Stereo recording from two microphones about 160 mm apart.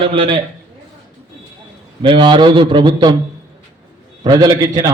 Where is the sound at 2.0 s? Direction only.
30° right (ahead or behind).